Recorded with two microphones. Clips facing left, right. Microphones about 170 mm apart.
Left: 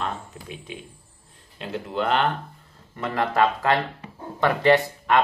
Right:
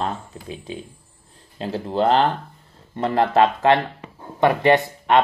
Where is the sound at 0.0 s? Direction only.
35° right (ahead or behind).